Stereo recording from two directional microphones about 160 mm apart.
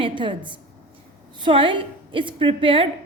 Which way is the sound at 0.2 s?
30° right (ahead or behind).